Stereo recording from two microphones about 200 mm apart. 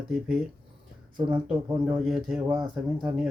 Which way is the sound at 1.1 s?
25° right (ahead or behind).